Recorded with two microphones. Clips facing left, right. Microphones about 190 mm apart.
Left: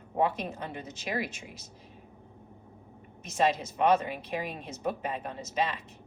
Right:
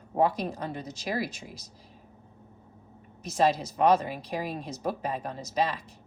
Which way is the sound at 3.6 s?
35° right (ahead or behind).